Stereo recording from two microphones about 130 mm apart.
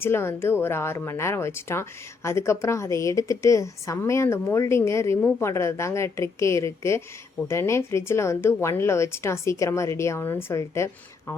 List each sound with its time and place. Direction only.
0.0 s a woman's voice: 20° left (ahead or behind)